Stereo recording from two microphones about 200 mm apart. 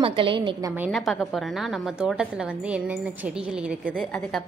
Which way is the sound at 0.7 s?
5° right (ahead or behind).